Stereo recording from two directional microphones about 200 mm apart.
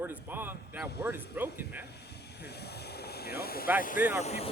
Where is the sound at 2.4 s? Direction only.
55° left (ahead or behind).